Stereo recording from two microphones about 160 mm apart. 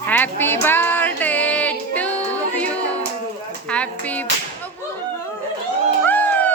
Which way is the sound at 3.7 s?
10° left (ahead or behind).